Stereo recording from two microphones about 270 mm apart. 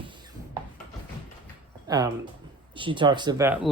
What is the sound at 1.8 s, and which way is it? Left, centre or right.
Speech, centre.